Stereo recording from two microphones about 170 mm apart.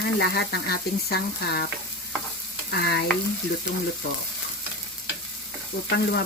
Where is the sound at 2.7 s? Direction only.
75° left (ahead or behind).